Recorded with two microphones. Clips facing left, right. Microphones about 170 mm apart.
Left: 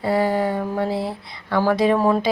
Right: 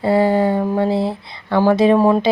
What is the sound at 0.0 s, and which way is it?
A woman's voice, 25° right (ahead or behind).